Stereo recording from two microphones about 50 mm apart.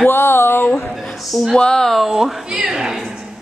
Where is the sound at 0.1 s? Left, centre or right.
Left.